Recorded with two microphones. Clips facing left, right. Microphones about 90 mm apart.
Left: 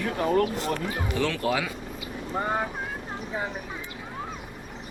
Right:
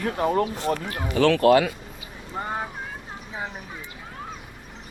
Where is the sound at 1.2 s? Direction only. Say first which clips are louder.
Right 11 dB; 85° right.